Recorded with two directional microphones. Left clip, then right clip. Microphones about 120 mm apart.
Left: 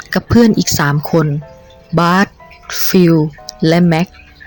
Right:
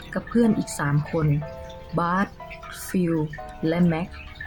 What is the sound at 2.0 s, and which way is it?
Speech, 55° left (ahead or behind).